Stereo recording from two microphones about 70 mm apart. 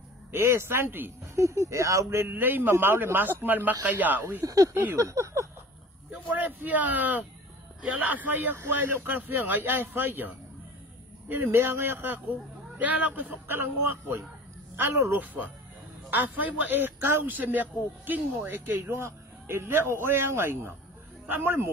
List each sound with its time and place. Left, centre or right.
0.3 s speech: right
1.3 s a man's voice: right
4.4 s speech: right
4.7 s a sound: right
6.2 s a man's voice: right
12.7 s a man's voice: right
18.8 s speech: right